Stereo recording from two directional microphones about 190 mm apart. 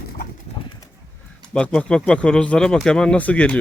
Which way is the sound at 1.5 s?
5° left (ahead or behind).